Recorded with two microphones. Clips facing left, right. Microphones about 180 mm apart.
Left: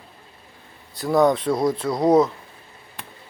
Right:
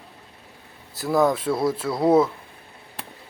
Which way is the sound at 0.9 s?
5° right (ahead or behind).